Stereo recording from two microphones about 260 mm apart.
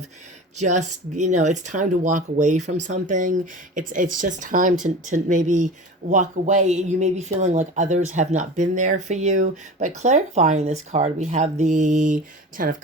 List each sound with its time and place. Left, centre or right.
0.5 s speech: right